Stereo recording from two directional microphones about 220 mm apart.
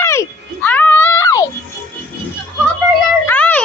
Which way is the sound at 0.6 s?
5° left (ahead or behind).